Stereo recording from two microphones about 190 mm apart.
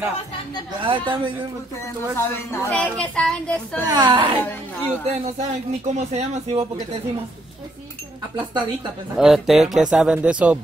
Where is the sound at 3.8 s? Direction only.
20° right (ahead or behind).